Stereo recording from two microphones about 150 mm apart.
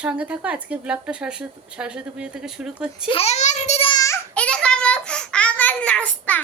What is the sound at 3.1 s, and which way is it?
Speech, 45° left (ahead or behind).